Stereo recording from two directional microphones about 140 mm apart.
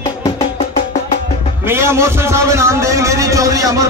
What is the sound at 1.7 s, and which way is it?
A man's voice, 20° right (ahead or behind).